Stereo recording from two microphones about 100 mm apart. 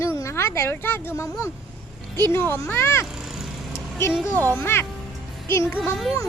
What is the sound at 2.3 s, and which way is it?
Speech, 20° left (ahead or behind).